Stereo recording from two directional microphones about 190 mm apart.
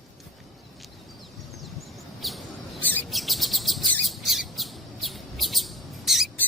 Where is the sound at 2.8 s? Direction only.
10° left (ahead or behind).